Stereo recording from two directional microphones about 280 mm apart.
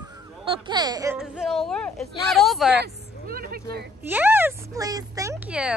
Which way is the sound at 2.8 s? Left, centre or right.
Right.